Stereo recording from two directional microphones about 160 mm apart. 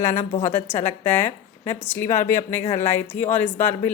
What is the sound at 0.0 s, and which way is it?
A woman's voice, 15° left (ahead or behind).